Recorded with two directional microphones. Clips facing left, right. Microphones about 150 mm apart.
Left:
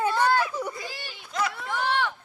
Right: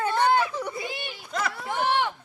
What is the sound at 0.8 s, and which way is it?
Speech, 20° right (ahead or behind).